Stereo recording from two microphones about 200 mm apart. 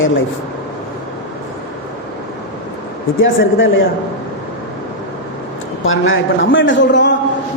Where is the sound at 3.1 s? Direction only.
75° left (ahead or behind).